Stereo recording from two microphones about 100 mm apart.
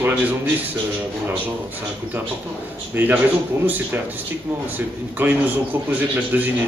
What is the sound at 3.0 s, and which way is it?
Speech, 20° right (ahead or behind).